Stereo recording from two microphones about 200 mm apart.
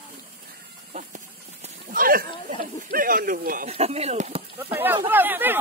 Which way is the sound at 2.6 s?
45° right (ahead or behind).